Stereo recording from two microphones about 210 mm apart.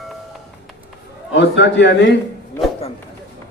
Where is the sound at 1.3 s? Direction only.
55° left (ahead or behind).